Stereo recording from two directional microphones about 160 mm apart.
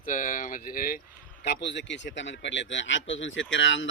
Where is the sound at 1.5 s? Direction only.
90° left.